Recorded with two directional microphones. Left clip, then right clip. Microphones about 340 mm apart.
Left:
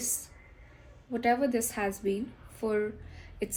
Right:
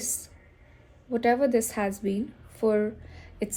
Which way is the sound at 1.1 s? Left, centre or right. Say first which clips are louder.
Right 4 dB; right.